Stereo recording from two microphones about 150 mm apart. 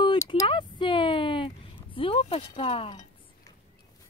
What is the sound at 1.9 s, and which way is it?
Speech, 35° left (ahead or behind).